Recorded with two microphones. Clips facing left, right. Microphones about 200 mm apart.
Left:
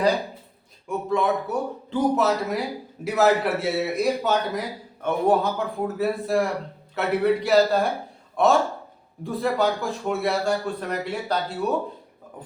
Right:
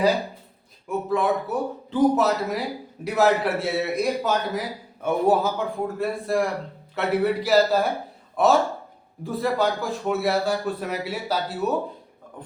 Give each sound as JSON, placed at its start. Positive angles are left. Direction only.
{"t": 0.9, "sound": "speech", "side_deg": 0}